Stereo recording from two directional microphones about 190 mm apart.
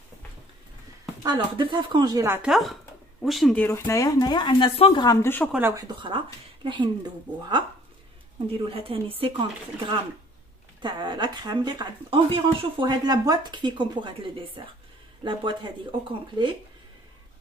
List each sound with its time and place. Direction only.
1.2 s speech: 25° right (ahead or behind)
2.5 s speech: centre (ahead or behind)
3.6 s speech: 15° left (ahead or behind)
5.5 s speech: 10° right (ahead or behind)
5.9 s speech: 25° right (ahead or behind)
8.6 s speech: 30° right (ahead or behind)